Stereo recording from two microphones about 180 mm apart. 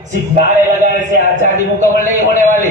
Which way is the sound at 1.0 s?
45° right (ahead or behind).